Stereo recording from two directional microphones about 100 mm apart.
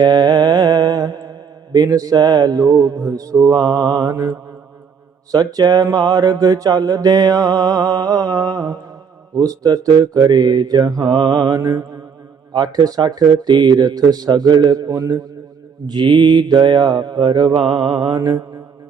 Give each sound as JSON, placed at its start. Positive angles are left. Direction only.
{"t": 0.0, "sound": "mantra", "side_deg": -40}
{"t": 4.1, "sound": "mantra", "side_deg": -25}
{"t": 5.3, "sound": "mantra", "side_deg": -40}
{"t": 13.5, "sound": "mantra", "side_deg": -50}